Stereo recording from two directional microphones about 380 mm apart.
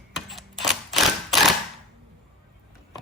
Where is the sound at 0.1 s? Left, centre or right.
Centre.